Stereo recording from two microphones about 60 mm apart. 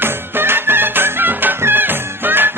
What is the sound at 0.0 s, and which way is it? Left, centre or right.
Music, right.